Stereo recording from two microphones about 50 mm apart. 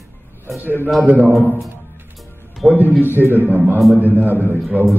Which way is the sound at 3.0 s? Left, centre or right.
Right.